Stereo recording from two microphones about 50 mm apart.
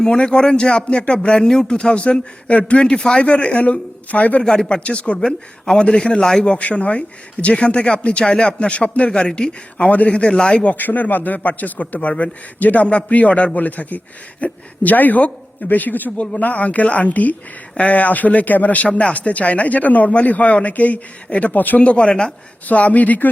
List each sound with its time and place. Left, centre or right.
0.0 s speech: centre
2.8 s speech: centre
5.1 s a man's voice: centre
10.8 s a man's voice: left
21.5 s a man's voice: left
21.8 s a man's voice: left